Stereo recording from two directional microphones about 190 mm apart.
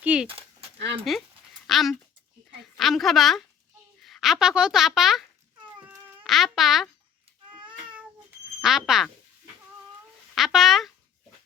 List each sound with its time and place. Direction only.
0.0 s speech: 5° right (ahead or behind)
0.3 s a sound: 30° right (ahead or behind)
1.1 s a woman's voice: centre (ahead or behind)
6.2 s speech: centre (ahead or behind)
8.6 s a woman's voice: centre (ahead or behind)
10.3 s speech: centre (ahead or behind)